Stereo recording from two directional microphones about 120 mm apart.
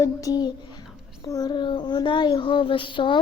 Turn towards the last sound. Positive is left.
turn(degrees=45)  # may be behind; listen again after turning